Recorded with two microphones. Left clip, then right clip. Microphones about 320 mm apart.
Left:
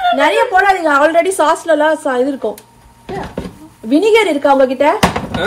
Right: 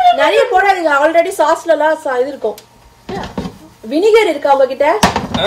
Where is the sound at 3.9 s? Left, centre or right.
Left.